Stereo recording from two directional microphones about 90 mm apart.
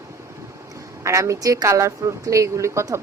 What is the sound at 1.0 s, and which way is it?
Speech, 35° right (ahead or behind).